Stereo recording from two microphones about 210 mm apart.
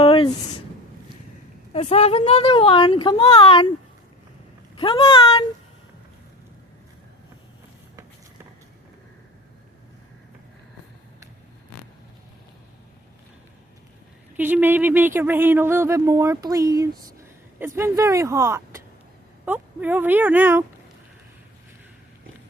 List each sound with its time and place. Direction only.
0.0 s a sound: 25° left (ahead or behind)
1.7 s speech: 30° left (ahead or behind)
4.8 s speech: 25° left (ahead or behind)
14.3 s speech: 10° right (ahead or behind)